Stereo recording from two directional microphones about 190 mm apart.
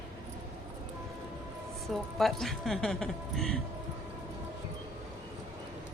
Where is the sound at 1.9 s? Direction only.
Centre (ahead or behind).